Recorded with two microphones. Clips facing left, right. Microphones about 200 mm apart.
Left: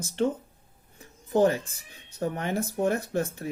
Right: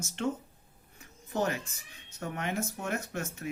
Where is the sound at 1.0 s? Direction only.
30° left (ahead or behind).